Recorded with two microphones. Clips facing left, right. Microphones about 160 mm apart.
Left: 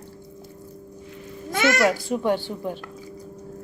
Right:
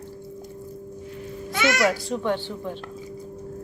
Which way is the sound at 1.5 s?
50° left (ahead or behind).